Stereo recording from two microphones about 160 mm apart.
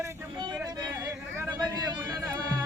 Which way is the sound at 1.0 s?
15° right (ahead or behind).